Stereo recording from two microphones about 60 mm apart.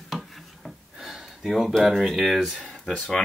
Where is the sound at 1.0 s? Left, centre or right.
Centre.